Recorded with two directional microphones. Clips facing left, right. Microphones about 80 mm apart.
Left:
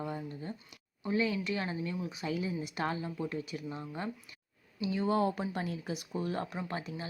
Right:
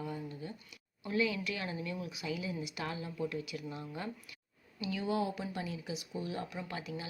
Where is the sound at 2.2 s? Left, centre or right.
Left.